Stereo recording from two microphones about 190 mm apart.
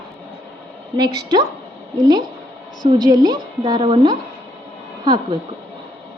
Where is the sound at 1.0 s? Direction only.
20° right (ahead or behind).